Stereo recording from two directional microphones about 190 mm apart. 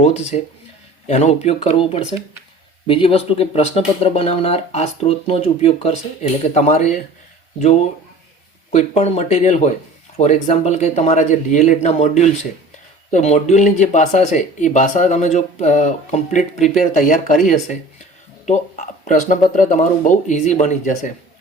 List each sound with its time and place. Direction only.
0.0 s speech: 35° left (ahead or behind)
8.7 s speech: 35° left (ahead or behind)
19.0 s speech: 40° left (ahead or behind)